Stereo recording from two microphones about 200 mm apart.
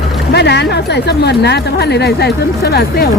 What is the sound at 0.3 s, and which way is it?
Speech, 55° left (ahead or behind).